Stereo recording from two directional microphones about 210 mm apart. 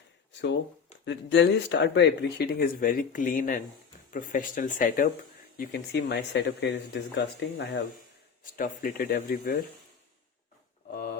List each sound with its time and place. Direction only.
1.0 s speech: 55° left (ahead or behind)
8.5 s speech: 40° left (ahead or behind)